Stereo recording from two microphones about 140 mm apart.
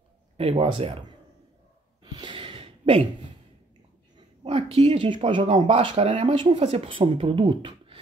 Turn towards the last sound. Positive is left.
turn(degrees=-35)  # may be behind; listen again after turning